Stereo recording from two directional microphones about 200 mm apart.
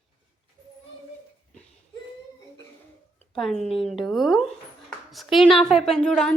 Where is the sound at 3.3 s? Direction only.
Centre (ahead or behind).